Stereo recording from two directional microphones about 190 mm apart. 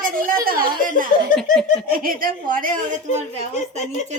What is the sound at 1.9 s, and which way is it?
Speech, 50° right (ahead or behind).